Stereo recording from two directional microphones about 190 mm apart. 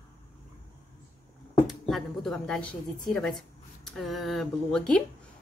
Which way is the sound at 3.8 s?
Centre (ahead or behind).